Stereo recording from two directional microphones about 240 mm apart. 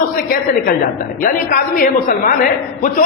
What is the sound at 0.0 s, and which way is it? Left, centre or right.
A woman's voice, left.